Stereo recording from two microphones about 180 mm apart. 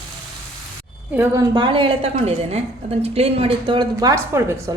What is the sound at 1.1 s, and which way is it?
A woman's voice, 15° right (ahead or behind).